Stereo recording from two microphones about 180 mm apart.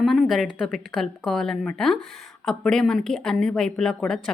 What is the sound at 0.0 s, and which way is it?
A woman's voice, centre (ahead or behind).